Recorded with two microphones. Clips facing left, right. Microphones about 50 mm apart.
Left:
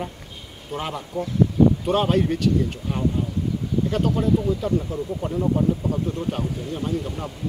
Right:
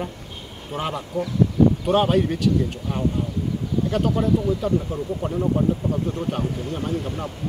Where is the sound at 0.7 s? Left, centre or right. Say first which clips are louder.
Right 2 dB; centre.